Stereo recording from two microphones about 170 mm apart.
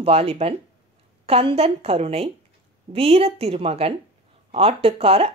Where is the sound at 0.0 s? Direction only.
35° right (ahead or behind).